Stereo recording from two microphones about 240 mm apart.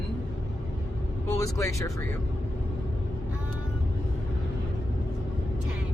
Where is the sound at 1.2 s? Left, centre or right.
Centre.